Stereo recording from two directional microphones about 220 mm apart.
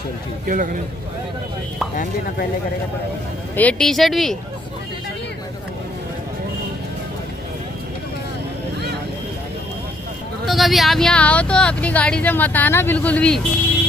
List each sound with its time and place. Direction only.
0.5 s a man's voice: 40° right (ahead or behind)
3.5 s speech: 5° left (ahead or behind)
10.4 s speech: centre (ahead or behind)